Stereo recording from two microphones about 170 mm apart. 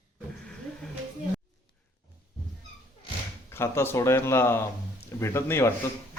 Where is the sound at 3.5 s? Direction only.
15° left (ahead or behind).